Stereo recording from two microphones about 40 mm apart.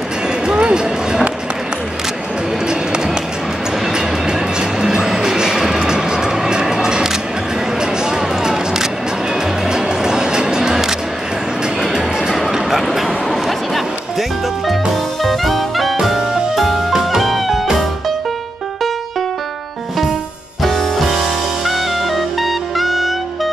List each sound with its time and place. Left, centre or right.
0.5 s a sound: right
3.9 s music: centre
7.8 s single-lens reflex camera: centre
9.7 s music: centre
11.9 s chatter: centre
12.4 s a sound: centre
12.8 s a sound: centre
15.2 s music: centre
20.6 s music: centre